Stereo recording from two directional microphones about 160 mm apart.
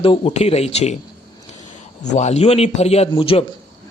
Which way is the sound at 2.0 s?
45° left (ahead or behind).